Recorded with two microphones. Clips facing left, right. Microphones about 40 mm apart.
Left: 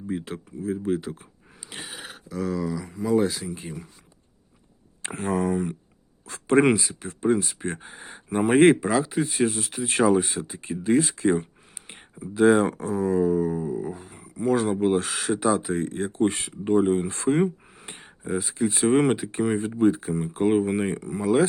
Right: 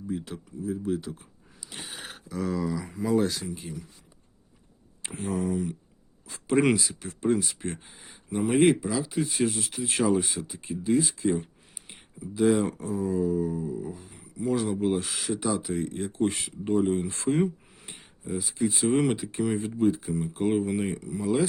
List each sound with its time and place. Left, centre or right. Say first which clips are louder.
0.1 s speech: left 3 dB; left
1.7 s speech: left 2 dB; centre
5.1 s speech: left 4 dB; left
6.6 s speech: left 3 dB; left
9.0 s speech: left 3 dB; left
17.7 s a sound: left 4 dB; left
18.7 s speech: left 5 dB; left